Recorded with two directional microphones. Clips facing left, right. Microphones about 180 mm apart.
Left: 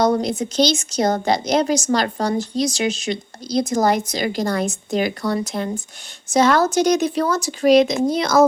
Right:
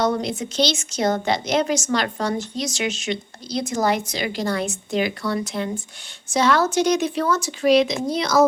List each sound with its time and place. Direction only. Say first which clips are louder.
0.0 s a woman's voice: left 4 dB; 40° left (ahead or behind)